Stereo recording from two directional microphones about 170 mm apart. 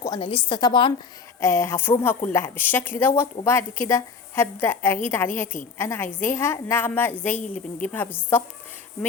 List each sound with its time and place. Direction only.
0.2 s a woman's voice: 30° left (ahead or behind)
1.4 s a woman's voice: 15° left (ahead or behind)